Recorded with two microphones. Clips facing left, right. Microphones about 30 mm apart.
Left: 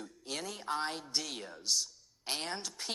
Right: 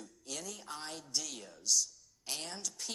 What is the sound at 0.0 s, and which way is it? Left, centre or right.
A woman's voice, left.